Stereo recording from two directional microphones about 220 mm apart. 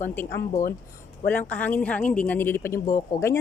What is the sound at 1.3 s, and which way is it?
Speech, 5° left (ahead or behind).